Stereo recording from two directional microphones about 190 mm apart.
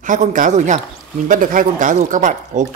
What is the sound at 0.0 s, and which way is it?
Speech, 40° right (ahead or behind).